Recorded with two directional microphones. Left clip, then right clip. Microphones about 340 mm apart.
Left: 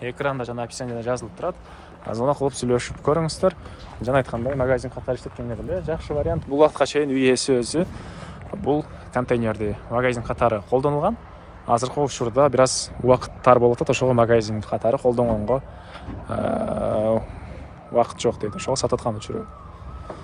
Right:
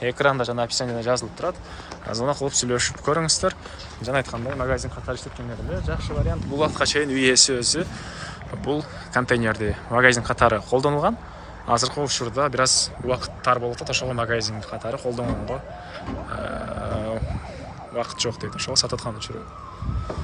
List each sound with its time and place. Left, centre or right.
0.0 s speech: centre